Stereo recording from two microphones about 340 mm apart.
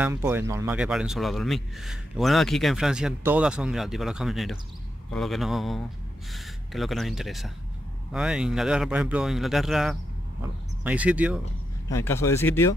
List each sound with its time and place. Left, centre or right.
0.0 s a man's voice: centre
11.9 s speech: centre